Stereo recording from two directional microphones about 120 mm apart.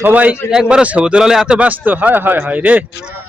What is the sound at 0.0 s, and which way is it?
A man's voice, 15° right (ahead or behind).